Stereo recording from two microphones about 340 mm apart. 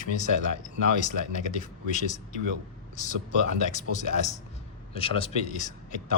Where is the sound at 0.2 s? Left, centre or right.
Left.